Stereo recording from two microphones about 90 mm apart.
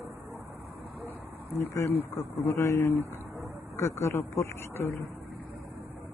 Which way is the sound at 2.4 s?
35° left (ahead or behind).